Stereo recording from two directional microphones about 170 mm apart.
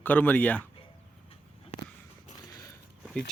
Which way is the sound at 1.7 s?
40° left (ahead or behind).